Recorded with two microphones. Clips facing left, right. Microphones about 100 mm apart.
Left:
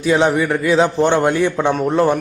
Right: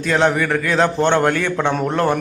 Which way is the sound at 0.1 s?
10° left (ahead or behind).